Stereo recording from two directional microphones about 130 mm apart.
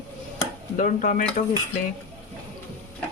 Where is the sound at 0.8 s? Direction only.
80° left.